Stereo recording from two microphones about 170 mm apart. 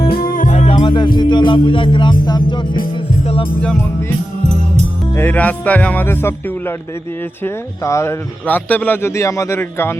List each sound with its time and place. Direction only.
0.0 s music: 60° left (ahead or behind); by 0.8 s 45° left (ahead or behind)
0.8 s music: 30° left (ahead or behind)
2.6 s music: 55° left (ahead or behind)
2.9 s music: 30° left (ahead or behind)
5.1 s speech: 10° left (ahead or behind)